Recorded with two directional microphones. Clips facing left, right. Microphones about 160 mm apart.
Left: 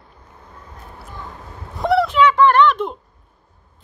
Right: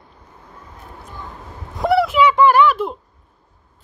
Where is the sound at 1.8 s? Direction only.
5° right (ahead or behind).